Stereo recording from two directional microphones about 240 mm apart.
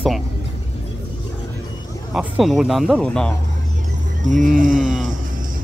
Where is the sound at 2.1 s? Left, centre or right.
Centre.